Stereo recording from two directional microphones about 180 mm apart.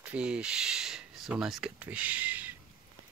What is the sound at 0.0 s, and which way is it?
Speech, 5° right (ahead or behind).